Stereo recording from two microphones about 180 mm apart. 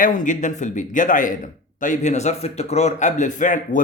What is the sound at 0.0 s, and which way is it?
A man's voice, 45° left (ahead or behind).